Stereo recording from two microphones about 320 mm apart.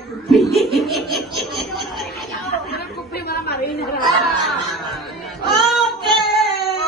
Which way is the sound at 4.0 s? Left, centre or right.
Centre.